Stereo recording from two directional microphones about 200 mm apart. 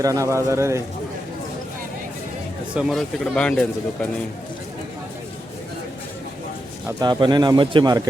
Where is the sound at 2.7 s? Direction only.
Centre (ahead or behind).